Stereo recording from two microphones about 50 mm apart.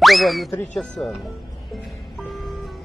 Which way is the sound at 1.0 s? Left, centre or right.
Centre.